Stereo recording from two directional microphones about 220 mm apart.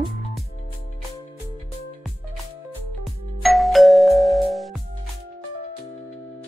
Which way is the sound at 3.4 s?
Centre (ahead or behind).